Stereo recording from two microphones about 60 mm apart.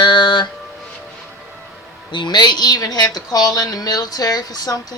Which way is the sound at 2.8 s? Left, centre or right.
Left.